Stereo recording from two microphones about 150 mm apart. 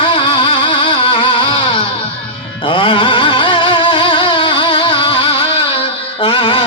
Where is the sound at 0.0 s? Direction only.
35° left (ahead or behind).